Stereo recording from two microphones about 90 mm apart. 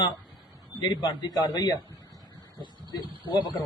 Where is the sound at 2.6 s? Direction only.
60° right (ahead or behind).